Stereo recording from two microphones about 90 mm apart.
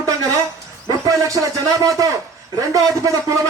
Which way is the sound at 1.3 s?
40° right (ahead or behind).